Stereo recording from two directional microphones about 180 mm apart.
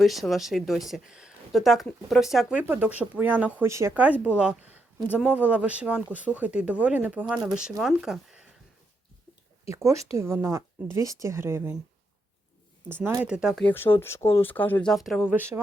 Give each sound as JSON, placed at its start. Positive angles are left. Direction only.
{"t": 0.0, "sound": "speech", "side_deg": 0}
{"t": 9.6, "sound": "speech", "side_deg": -15}
{"t": 12.9, "sound": "speech", "side_deg": -15}
{"t": 13.7, "sound": "speech", "side_deg": 10}
{"t": 15.3, "sound": "speech", "side_deg": -10}